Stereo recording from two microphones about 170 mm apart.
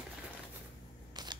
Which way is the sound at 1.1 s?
25° right (ahead or behind).